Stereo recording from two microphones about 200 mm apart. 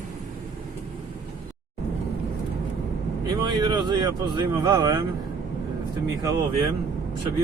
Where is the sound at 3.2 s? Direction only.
20° right (ahead or behind).